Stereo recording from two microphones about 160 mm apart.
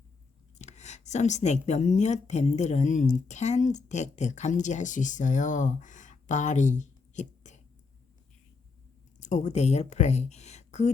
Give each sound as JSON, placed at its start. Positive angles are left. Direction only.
{"t": 0.6, "sound": "a woman's voice", "side_deg": 45}
{"t": 9.2, "sound": "a woman's voice", "side_deg": 45}